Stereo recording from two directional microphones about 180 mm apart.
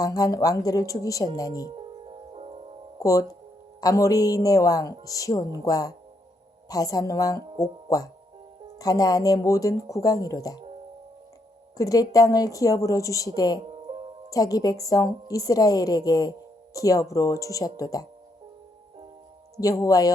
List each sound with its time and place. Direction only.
0.0 s a woman's voice: 20° left (ahead or behind)
1.7 s music: 30° right (ahead or behind)
3.0 s a woman's voice: 20° left (ahead or behind)
11.8 s a woman's voice: 20° left (ahead or behind)
13.6 s music: 30° right (ahead or behind)
14.3 s a woman's voice: 20° left (ahead or behind)
19.5 s a woman's voice: 20° left (ahead or behind)